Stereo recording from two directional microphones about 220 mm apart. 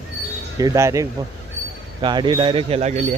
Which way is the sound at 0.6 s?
15° right (ahead or behind).